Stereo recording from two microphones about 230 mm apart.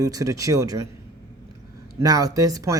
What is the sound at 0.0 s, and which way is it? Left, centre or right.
Speech, centre.